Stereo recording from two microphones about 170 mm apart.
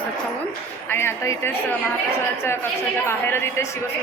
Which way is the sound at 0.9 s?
15° left (ahead or behind).